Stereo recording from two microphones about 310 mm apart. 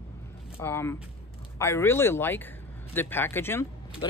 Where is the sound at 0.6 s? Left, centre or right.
Centre.